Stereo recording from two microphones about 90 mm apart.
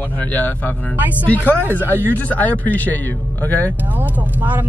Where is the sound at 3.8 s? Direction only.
20° right (ahead or behind).